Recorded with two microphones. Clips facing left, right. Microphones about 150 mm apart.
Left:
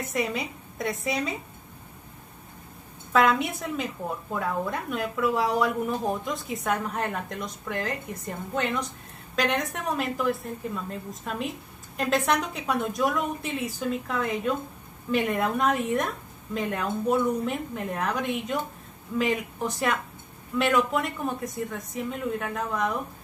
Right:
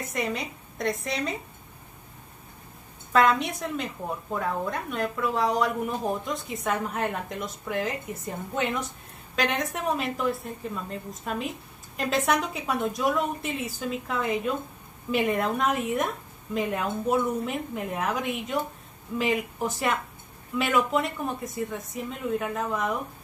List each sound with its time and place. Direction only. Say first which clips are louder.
0.0 s a woman's voice: left 1 dB; centre (ahead or behind)
3.1 s a woman's voice: even; centre (ahead or behind)